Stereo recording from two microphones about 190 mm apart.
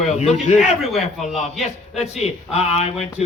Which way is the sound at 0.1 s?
35° left (ahead or behind).